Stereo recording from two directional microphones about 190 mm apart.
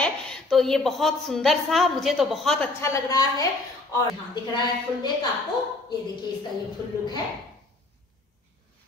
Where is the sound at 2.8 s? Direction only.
15° left (ahead or behind).